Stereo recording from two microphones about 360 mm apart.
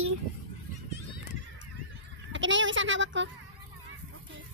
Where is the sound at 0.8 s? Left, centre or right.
Right.